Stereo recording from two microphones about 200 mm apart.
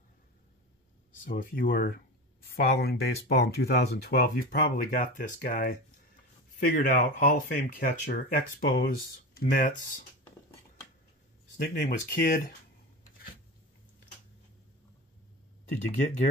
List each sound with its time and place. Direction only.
1.2 s speech: 45° left (ahead or behind)
11.5 s speech: 45° left (ahead or behind)